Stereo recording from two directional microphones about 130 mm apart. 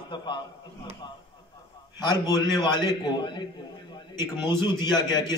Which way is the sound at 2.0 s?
35° left (ahead or behind).